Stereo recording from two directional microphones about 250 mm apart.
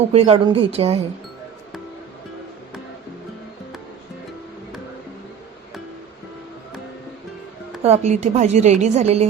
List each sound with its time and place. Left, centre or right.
0.1 s a woman's voice: right
7.8 s a woman's voice: right